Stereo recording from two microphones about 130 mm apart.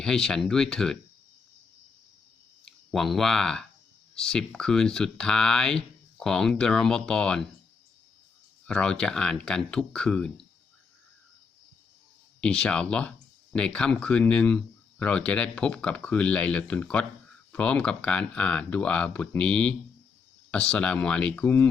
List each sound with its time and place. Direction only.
0.0 s speech: 5° left (ahead or behind)
2.6 s speech: centre (ahead or behind)
8.6 s speech: 5° left (ahead or behind)
12.4 s speech: 10° left (ahead or behind)